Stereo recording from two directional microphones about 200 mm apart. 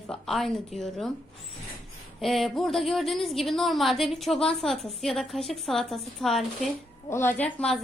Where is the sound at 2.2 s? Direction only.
Centre (ahead or behind).